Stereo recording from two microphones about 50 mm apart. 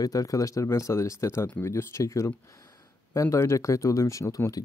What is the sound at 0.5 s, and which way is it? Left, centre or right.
Speech, left.